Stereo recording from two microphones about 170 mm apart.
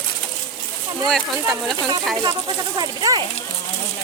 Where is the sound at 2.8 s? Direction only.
25° right (ahead or behind).